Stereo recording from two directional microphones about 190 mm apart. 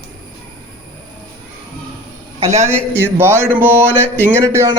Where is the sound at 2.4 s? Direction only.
35° right (ahead or behind).